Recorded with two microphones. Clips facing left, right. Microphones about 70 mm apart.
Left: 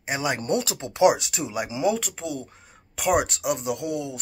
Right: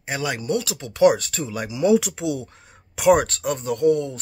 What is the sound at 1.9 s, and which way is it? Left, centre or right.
Speech, centre.